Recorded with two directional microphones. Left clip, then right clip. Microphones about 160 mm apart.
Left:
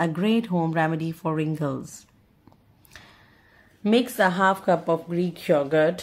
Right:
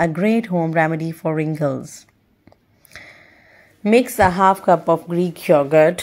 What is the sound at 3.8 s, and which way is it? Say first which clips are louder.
Speech: right 7 dB; 35° right (ahead or behind).